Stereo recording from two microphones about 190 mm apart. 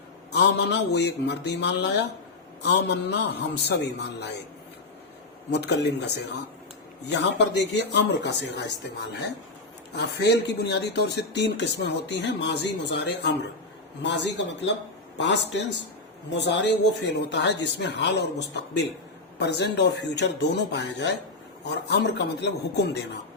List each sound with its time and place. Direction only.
0.3 s speech: 65° left (ahead or behind)
5.5 s speech: 65° left (ahead or behind)
7.1 s speech: 65° left (ahead or behind)
9.9 s speech: 65° left (ahead or behind)